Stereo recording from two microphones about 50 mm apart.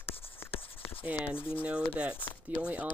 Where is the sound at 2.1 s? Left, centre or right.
Left.